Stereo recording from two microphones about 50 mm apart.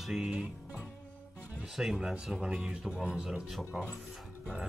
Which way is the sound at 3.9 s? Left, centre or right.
Centre.